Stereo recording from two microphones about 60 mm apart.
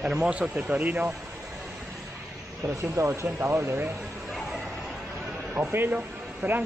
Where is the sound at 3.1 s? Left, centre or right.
Right.